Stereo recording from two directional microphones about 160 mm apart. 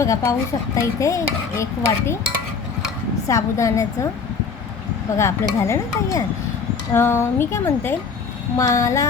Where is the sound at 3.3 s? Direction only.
20° left (ahead or behind).